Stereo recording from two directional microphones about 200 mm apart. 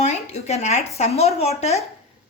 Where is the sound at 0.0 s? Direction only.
35° left (ahead or behind).